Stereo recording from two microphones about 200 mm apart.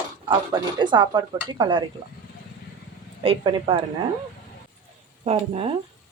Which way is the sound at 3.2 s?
25° right (ahead or behind).